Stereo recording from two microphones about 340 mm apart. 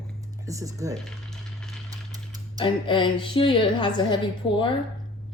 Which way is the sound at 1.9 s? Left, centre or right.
Centre.